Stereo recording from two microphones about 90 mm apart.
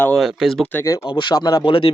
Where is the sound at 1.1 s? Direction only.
60° left (ahead or behind).